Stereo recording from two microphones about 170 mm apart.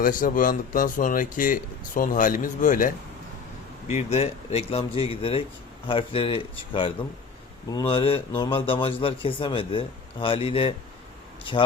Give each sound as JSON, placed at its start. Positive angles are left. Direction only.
{"t": 0.0, "sound": "a man's voice", "side_deg": 55}